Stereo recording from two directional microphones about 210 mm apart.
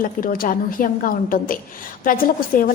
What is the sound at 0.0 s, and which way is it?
A woman's voice, 40° left (ahead or behind).